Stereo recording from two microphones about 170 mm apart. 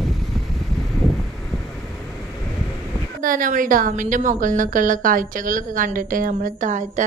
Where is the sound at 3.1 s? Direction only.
55° right (ahead or behind).